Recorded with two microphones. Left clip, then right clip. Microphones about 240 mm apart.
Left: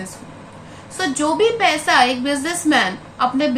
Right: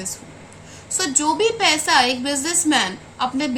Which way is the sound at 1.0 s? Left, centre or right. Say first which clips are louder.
Left 2 dB; right.